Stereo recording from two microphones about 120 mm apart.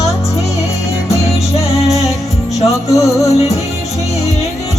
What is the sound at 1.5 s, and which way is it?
Music, 60° left (ahead or behind).